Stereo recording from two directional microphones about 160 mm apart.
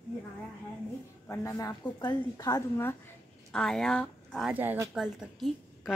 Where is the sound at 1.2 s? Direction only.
15° left (ahead or behind).